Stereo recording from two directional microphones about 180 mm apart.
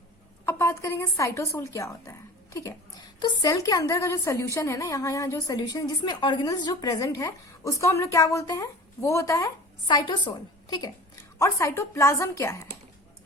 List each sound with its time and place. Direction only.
0.4 s a woman's voice: 15° left (ahead or behind)